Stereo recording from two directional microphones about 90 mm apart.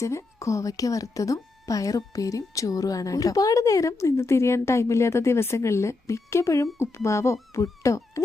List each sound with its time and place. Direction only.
0.0 s a woman's voice: 35° left (ahead or behind)